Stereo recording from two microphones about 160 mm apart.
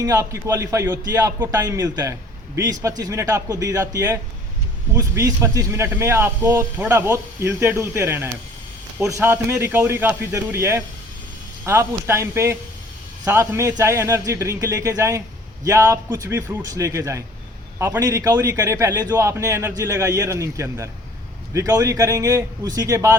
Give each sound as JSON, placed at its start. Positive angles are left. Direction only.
{"t": 0.0, "sound": "a man's voice", "side_deg": -20}